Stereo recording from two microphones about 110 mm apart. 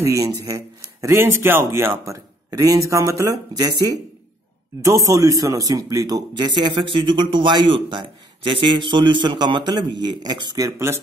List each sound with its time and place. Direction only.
0.0 s a man's voice: 30° right (ahead or behind)